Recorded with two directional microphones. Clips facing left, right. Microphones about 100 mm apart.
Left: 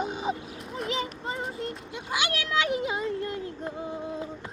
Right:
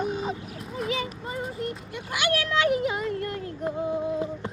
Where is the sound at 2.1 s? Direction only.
20° left (ahead or behind).